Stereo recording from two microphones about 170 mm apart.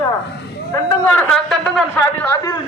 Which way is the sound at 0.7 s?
10° left (ahead or behind).